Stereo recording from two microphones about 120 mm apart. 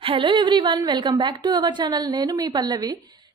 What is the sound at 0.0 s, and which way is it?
A woman's voice, 45° right (ahead or behind).